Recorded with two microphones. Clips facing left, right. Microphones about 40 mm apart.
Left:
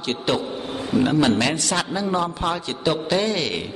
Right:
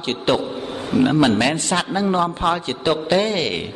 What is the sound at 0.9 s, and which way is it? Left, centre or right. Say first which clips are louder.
Speech: right 3 dB; right.